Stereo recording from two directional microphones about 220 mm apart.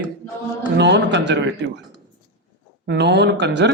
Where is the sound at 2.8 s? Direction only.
50° right (ahead or behind).